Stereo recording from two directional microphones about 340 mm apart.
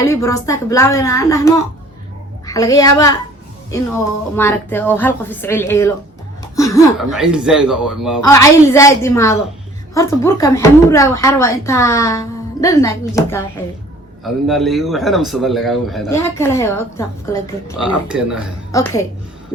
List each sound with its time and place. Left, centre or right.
0.0 s speech: centre
6.4 s a sound: centre
7.0 s a man's voice: centre
8.3 s speech: centre
14.4 s a man's voice: centre
17.8 s a man's voice: centre
18.7 s speech: centre